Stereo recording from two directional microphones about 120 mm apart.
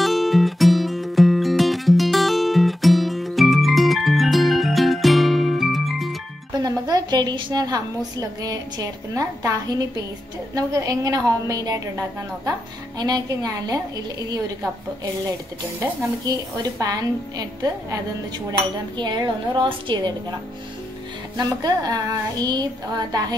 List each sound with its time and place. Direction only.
0.0 s music: centre (ahead or behind)
6.6 s a woman's voice: 30° right (ahead or behind)
13.0 s a woman's voice: 30° right (ahead or behind)
16.7 s a woman's voice: 30° right (ahead or behind)
18.9 s a woman's voice: 40° right (ahead or behind)
21.4 s a woman's voice: 30° right (ahead or behind)